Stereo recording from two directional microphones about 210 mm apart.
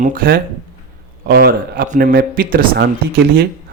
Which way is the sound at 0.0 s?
40° right (ahead or behind).